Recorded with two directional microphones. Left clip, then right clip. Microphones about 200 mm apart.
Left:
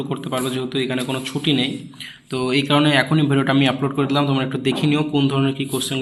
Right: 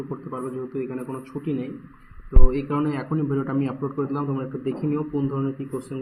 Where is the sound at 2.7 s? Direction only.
40° left (ahead or behind).